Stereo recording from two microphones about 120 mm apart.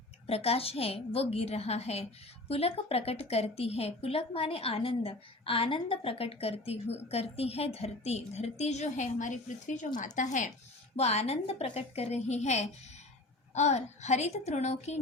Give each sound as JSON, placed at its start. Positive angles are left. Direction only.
{"t": 0.3, "sound": "a woman's voice", "side_deg": 55}
{"t": 10.9, "sound": "a woman's voice", "side_deg": 60}